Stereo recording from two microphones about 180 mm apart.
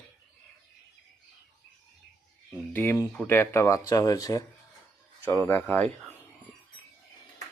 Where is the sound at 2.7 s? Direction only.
15° left (ahead or behind).